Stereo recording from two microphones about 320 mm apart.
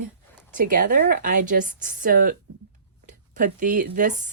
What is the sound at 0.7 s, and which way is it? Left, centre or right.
Speech, right.